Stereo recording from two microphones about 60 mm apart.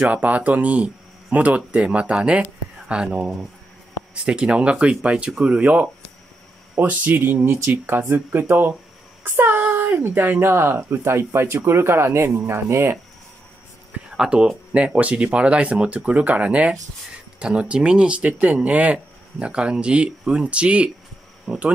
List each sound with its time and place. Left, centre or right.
0.1 s speech: right
9.2 s child singing: right
9.9 s speech: right
14.1 s speech: centre